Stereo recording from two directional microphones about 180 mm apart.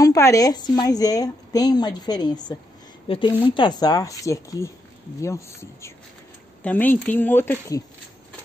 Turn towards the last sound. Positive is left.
turn(degrees=15)  # may be behind; listen again after turning